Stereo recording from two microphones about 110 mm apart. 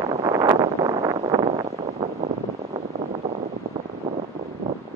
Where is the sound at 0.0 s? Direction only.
30° right (ahead or behind).